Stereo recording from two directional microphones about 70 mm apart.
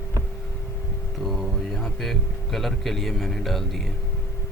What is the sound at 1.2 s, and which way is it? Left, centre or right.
Speech, centre.